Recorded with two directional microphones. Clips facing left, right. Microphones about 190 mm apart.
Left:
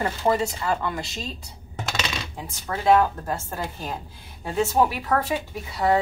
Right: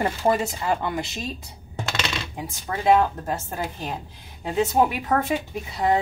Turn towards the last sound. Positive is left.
turn(degrees=-20)  # may be behind; listen again after turning